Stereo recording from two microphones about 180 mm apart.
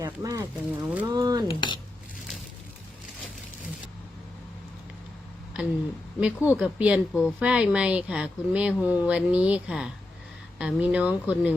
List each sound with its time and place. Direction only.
0.0 s speech: 20° right (ahead or behind)
1.1 s a sound: 20° right (ahead or behind)
1.5 s speech: 25° left (ahead or behind)
6.1 s speech: 5° right (ahead or behind)
7.1 s a woman's voice: 5° left (ahead or behind)
7.3 s speech: 5° right (ahead or behind)